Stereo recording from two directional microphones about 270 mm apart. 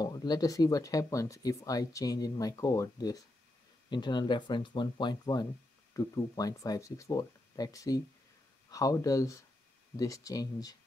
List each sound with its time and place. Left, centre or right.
0.0 s speech: centre